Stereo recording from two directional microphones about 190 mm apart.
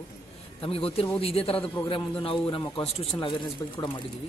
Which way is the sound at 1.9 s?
30° left (ahead or behind).